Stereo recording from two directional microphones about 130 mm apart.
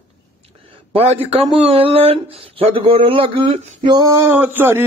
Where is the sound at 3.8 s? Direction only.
30° right (ahead or behind).